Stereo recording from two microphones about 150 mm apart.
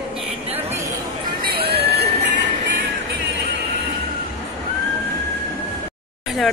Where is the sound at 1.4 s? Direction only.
85° right.